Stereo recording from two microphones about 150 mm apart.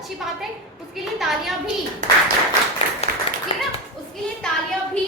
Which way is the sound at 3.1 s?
75° right (ahead or behind).